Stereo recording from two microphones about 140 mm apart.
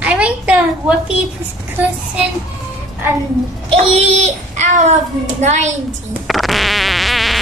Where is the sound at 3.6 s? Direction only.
45° right (ahead or behind).